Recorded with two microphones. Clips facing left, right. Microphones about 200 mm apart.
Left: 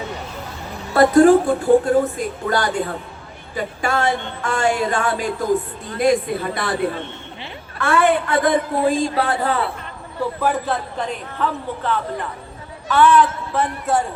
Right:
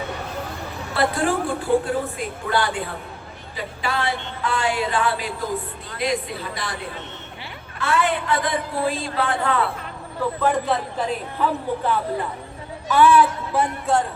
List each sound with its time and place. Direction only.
0.9 s a woman's voice: 45° left (ahead or behind)
7.8 s speech: 55° left (ahead or behind)
9.1 s a man's voice: 35° left (ahead or behind)
10.4 s a man's voice: 5° left (ahead or behind)
13.9 s a man's voice: centre (ahead or behind)